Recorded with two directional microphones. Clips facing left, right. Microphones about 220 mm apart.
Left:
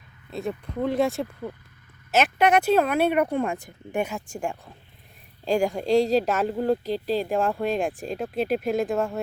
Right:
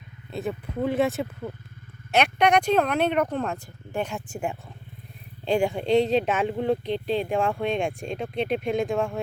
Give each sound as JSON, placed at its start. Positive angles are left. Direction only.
{"t": 0.3, "sound": "speech", "side_deg": 0}
{"t": 4.1, "sound": "speech", "side_deg": -5}